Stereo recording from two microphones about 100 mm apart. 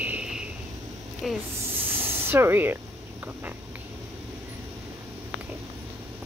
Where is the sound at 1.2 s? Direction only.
Centre (ahead or behind).